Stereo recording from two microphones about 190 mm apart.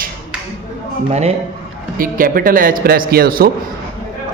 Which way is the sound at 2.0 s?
50° right (ahead or behind).